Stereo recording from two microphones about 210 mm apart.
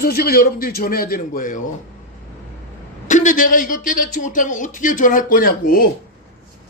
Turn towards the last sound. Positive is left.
turn(degrees=45)  # may be behind; listen again after turning